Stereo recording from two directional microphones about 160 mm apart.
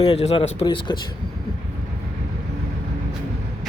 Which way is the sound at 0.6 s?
30° left (ahead or behind).